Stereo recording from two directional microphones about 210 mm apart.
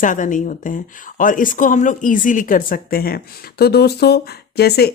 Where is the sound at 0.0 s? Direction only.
40° left (ahead or behind).